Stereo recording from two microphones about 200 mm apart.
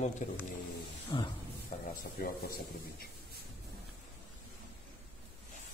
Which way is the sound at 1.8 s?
50° left (ahead or behind).